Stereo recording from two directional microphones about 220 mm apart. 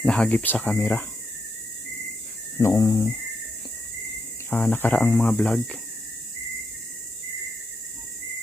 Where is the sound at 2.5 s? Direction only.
15° left (ahead or behind).